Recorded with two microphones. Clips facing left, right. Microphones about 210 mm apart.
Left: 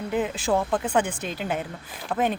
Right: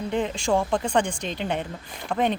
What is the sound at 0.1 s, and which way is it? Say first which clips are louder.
Speech: even; 5° left (ahead or behind).